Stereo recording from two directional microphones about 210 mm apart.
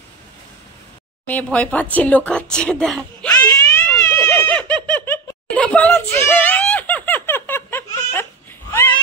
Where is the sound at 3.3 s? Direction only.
15° left (ahead or behind).